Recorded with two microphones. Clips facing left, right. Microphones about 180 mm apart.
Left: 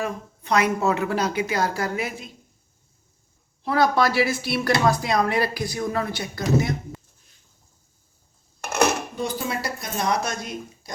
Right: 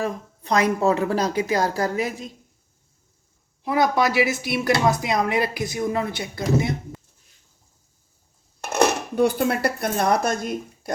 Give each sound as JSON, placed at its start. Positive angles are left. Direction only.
{"t": 0.0, "sound": "speech", "side_deg": -35}
{"t": 3.6, "sound": "speech", "side_deg": -20}
{"t": 9.1, "sound": "speech", "side_deg": -60}